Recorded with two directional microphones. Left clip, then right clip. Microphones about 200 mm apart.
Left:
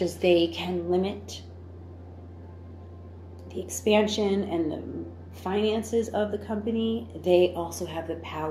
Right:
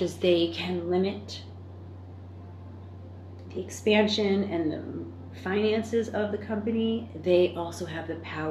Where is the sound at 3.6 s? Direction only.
20° left (ahead or behind).